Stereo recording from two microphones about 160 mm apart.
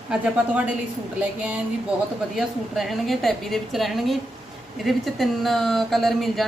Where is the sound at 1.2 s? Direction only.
10° right (ahead or behind).